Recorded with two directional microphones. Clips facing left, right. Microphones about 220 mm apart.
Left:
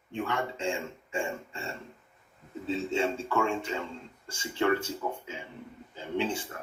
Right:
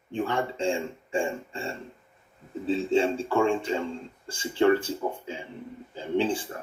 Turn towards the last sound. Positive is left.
turn(degrees=-35)  # may be behind; listen again after turning